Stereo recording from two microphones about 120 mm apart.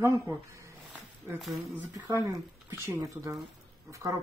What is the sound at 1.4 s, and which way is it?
Speech, centre (ahead or behind).